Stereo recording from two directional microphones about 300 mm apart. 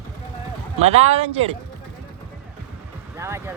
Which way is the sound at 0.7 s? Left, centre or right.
Right.